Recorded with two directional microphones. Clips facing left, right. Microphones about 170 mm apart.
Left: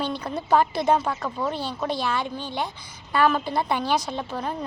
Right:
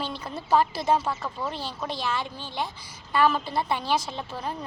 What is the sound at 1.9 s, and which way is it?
Speech, centre (ahead or behind).